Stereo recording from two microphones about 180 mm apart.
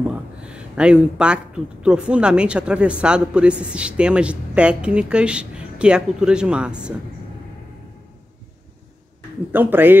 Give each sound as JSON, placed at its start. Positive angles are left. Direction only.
{"t": 0.4, "sound": "speech", "side_deg": -5}
{"t": 9.5, "sound": "speech", "side_deg": -10}